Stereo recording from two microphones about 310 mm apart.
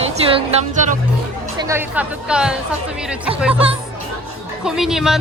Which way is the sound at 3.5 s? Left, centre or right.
Centre.